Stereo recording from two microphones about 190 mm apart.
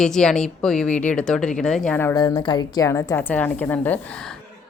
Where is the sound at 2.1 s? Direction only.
25° left (ahead or behind).